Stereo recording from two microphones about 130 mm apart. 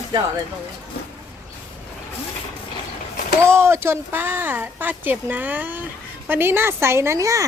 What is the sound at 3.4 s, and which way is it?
A woman's voice, 20° right (ahead or behind).